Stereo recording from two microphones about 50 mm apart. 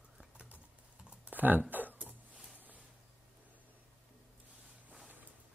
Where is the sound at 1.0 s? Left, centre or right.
Right.